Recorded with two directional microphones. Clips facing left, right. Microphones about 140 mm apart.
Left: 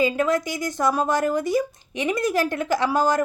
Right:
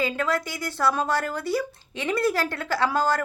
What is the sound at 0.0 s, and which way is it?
Speech, 20° left (ahead or behind).